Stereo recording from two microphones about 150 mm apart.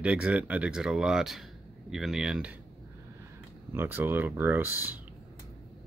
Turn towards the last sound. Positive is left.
turn(degrees=-10)  # may be behind; listen again after turning